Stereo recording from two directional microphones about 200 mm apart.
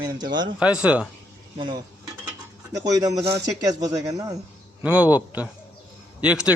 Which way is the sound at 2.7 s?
15° right (ahead or behind).